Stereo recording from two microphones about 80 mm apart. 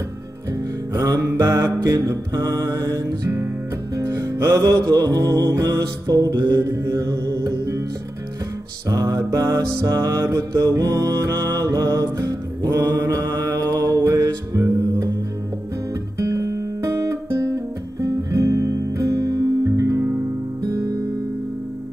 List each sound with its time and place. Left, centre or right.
0.5 s music: right
8.8 s music: right
14.1 s music: right
15.9 s music: right